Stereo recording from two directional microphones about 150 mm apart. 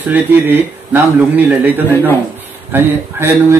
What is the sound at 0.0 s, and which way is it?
Speech, 10° right (ahead or behind).